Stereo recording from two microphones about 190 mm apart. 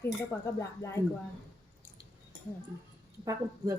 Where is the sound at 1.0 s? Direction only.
10° left (ahead or behind).